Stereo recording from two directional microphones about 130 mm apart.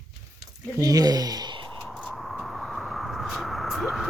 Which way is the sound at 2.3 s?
Centre (ahead or behind).